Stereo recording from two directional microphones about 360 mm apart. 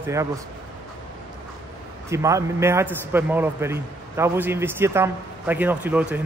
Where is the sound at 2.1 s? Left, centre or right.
Centre.